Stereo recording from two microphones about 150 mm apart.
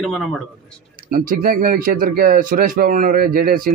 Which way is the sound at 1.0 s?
70° right (ahead or behind).